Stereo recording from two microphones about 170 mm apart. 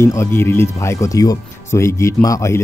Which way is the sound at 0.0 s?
15° left (ahead or behind).